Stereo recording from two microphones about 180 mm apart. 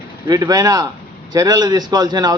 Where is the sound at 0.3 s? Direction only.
20° right (ahead or behind).